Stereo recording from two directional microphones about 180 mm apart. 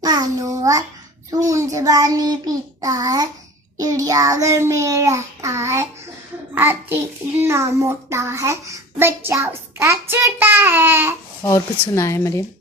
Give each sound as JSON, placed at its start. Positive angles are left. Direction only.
{"t": 0.0, "sound": "babbling", "side_deg": -20}
{"t": 1.3, "sound": "a child's voice", "side_deg": -20}
{"t": 11.4, "sound": "speech", "side_deg": 15}